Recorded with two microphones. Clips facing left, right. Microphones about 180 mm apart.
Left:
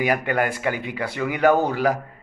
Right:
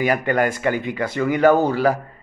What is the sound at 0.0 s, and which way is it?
A man's voice, 10° left (ahead or behind).